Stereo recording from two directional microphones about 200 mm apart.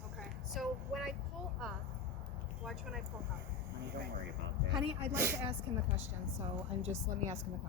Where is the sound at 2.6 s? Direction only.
Centre (ahead or behind).